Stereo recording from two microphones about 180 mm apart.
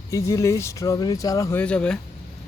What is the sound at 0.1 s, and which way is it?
Speech, 15° left (ahead or behind).